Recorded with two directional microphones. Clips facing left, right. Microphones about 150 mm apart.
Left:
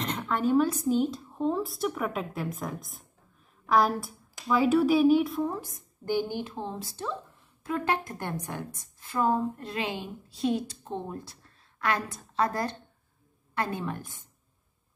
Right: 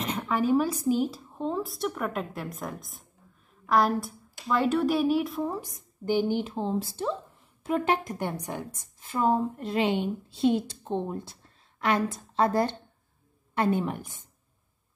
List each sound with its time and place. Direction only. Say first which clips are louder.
0.0 s a woman's voice: right 1 dB; 10° right (ahead or behind)
5.6 s a woman's voice: right 2 dB; 15° right (ahead or behind)